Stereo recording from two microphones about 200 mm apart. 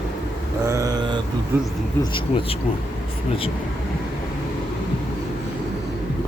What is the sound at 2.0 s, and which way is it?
Speech, 25° left (ahead or behind).